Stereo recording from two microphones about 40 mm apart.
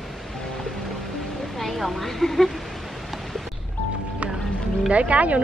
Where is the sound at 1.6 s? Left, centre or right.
Centre.